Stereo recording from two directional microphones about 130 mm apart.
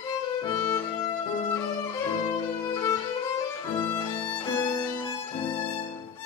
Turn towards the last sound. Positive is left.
turn(degrees=30)  # may be behind; listen again after turning